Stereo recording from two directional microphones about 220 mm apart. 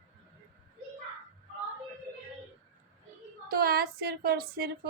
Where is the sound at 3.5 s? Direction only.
45° right (ahead or behind).